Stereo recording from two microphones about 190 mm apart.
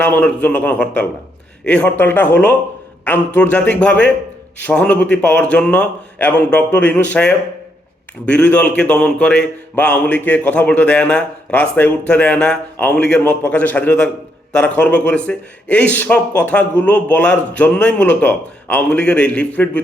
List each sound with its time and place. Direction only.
0.0 s speech: 5° left (ahead or behind)